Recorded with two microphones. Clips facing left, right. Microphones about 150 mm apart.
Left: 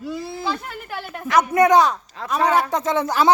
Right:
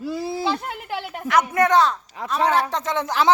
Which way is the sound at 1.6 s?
15° left (ahead or behind).